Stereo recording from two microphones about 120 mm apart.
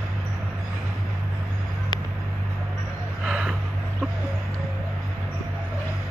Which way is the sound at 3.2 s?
5° right (ahead or behind).